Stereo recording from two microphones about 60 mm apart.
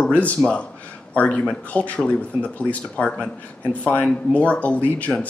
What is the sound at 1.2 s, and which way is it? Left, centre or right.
Speech, left.